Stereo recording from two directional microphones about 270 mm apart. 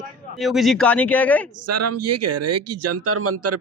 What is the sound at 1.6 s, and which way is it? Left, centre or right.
Speech, right.